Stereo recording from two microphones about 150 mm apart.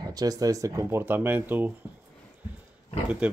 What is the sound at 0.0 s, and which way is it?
Speech, 25° right (ahead or behind).